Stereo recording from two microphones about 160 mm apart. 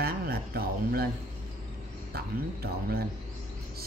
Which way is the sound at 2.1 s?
75° right (ahead or behind).